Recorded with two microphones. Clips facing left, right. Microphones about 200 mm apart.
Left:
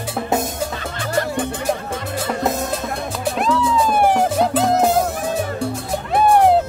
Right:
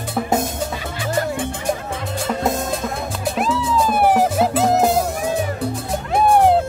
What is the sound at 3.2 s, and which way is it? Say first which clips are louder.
Music: left 2 dB; centre (ahead or behind).